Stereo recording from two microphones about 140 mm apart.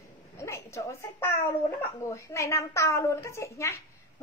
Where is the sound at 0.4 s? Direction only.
20° left (ahead or behind).